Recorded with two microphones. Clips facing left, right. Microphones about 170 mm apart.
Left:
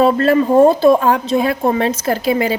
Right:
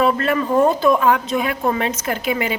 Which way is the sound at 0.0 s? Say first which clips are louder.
Left 6 dB; 30° left (ahead or behind).